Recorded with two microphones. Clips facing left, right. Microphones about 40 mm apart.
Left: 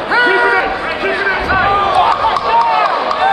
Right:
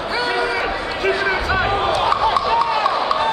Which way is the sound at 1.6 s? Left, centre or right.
Left.